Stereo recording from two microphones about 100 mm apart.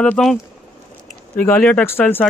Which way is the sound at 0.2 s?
5° left (ahead or behind).